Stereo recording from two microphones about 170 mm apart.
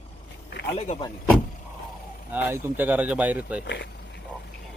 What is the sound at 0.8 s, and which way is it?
Speech, 40° left (ahead or behind).